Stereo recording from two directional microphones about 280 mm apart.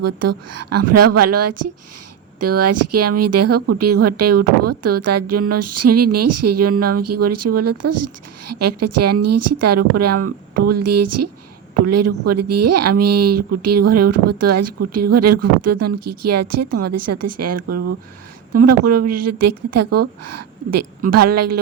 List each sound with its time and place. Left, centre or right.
0.0 s speech: right